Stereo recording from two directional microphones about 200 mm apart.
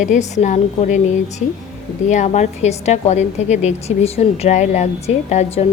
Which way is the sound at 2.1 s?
35° left (ahead or behind).